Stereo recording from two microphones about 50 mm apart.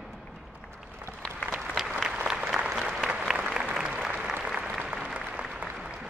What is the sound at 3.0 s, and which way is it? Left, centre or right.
Applause, centre.